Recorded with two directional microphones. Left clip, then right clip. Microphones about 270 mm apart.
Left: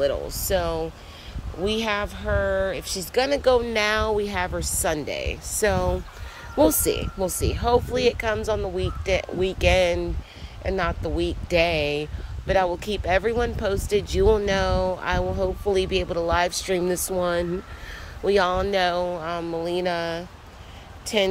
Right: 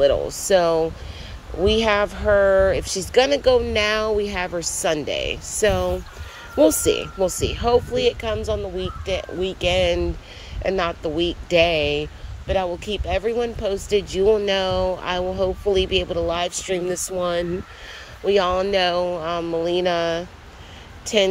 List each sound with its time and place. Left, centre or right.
0.0 s speech: centre
8.7 s speech: left
9.8 s speech: centre